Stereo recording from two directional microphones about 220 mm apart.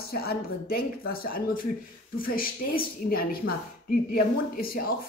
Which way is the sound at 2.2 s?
40° left (ahead or behind).